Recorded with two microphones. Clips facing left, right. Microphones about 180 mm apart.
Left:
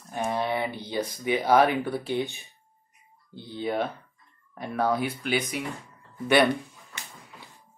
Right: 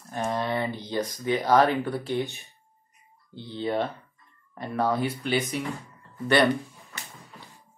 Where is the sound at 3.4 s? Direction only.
10° left (ahead or behind).